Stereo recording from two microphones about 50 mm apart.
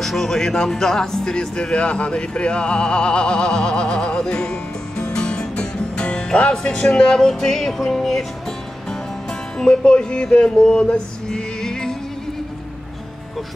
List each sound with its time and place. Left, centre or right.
0.0 s speech: centre; by 6.5 s left
6.5 s music: centre
9.6 s music: centre